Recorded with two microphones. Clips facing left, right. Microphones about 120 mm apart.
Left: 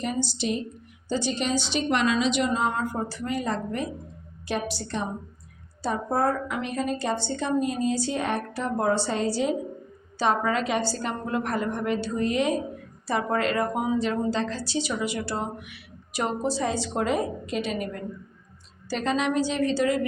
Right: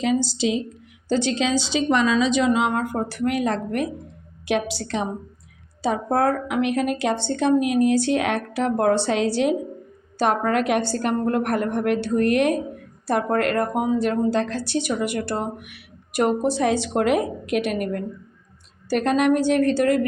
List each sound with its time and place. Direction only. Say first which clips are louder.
0.0 s a woman's voice: right 7 dB; 90° right
2.5 s a woman's voice: right 5 dB; 70° right (ahead or behind)
4.4 s a woman's voice: right 6 dB; 85° right
5.8 s a woman's voice: right 4 dB; 75° right (ahead or behind)
10.2 s speech: right 4 dB; 55° right (ahead or behind)